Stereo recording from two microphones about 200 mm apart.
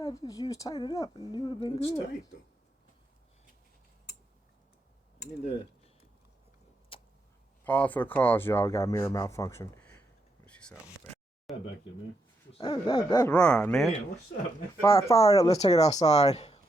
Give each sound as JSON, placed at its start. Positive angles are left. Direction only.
{"t": 0.0, "sound": "a woman's voice", "side_deg": 15}
{"t": 6.9, "sound": "vehicle", "side_deg": 25}
{"t": 7.6, "sound": "speech", "side_deg": 5}
{"t": 10.4, "sound": "a sound", "side_deg": 5}
{"t": 12.5, "sound": "a woman's voice", "side_deg": 25}
{"t": 13.3, "sound": "speech", "side_deg": 5}
{"t": 14.8, "sound": "speech", "side_deg": 15}
{"t": 15.5, "sound": "speech", "side_deg": 30}